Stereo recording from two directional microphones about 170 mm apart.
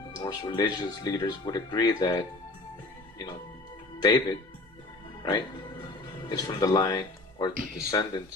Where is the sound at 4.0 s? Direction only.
25° left (ahead or behind).